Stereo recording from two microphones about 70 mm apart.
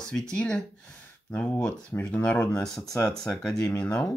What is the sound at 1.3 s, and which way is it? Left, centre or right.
Speech, left.